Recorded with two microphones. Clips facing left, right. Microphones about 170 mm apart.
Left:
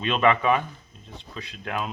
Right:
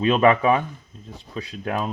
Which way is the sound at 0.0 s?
40° right (ahead or behind).